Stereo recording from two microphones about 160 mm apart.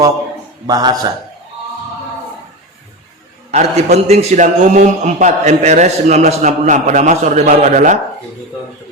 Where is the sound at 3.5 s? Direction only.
45° right (ahead or behind).